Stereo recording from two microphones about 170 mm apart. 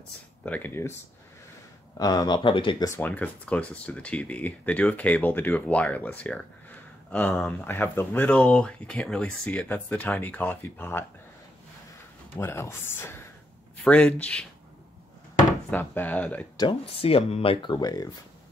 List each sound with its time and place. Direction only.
0.5 s speech: 10° left (ahead or behind)
2.0 s speech: 25° left (ahead or behind)
3.0 s speech: 10° left (ahead or behind)
12.4 s speech: 15° left (ahead or behind)
15.7 s speech: 10° left (ahead or behind)
16.5 s speech: 30° left (ahead or behind)